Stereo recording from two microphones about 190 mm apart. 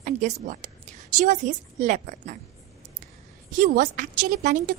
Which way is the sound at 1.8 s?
40° right (ahead or behind).